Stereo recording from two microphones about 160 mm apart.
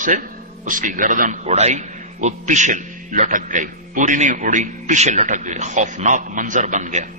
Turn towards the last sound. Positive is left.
turn(degrees=-50)  # may be behind; listen again after turning